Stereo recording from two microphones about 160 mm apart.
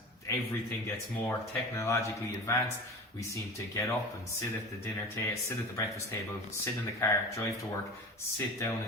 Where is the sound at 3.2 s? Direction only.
20° left (ahead or behind).